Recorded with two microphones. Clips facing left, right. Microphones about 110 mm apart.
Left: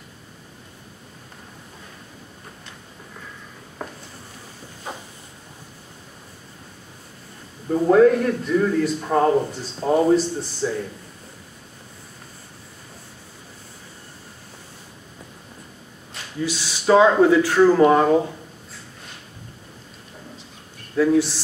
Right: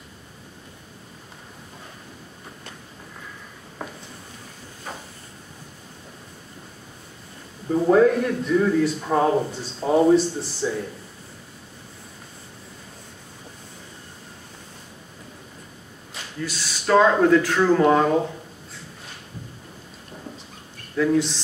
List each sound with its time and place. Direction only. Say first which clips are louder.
3.8 s a sound: left 1 dB; centre (ahead or behind)
7.7 s a man's voice: left 2 dB; centre (ahead or behind)
16.3 s speech: left 5 dB; 10° left (ahead or behind)
20.9 s speech: left 3 dB; 5° left (ahead or behind)